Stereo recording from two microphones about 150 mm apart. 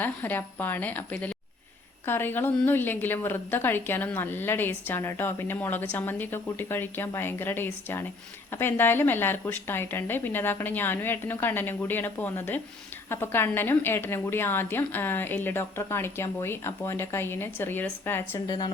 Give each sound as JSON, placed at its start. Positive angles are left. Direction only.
{"t": 0.0, "sound": "a woman's voice", "side_deg": 10}
{"t": 18.4, "sound": "a woman's voice", "side_deg": 30}